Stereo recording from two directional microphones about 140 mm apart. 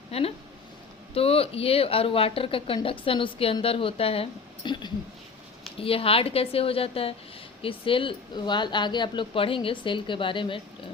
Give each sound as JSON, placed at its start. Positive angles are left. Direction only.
{"t": 0.1, "sound": "a woman's voice", "side_deg": 45}